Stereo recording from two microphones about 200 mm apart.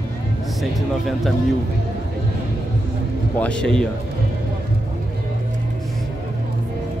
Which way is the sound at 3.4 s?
5° left (ahead or behind).